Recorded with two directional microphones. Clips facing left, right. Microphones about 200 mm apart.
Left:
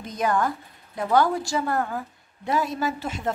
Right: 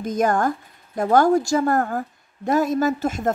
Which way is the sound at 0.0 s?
45° right (ahead or behind).